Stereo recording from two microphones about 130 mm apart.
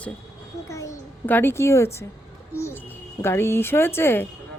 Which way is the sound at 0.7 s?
25° left (ahead or behind).